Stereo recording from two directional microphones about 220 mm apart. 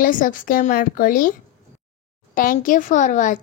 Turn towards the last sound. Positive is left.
turn(degrees=35)  # may be behind; listen again after turning